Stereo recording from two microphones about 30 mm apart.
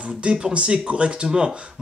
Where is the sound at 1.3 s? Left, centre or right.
Right.